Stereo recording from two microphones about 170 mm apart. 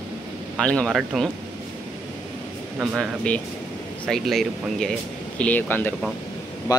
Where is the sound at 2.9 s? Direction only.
5° left (ahead or behind).